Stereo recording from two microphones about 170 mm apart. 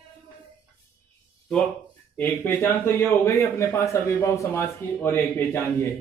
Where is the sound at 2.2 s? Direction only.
15° left (ahead or behind).